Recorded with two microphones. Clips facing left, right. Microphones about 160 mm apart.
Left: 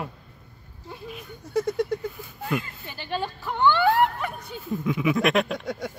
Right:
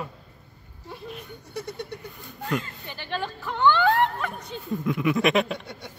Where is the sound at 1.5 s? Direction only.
90° left.